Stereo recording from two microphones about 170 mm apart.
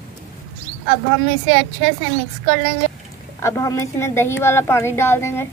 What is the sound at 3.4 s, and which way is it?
Speech, 20° left (ahead or behind).